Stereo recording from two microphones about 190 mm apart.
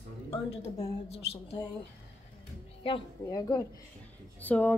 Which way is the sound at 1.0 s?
35° left (ahead or behind).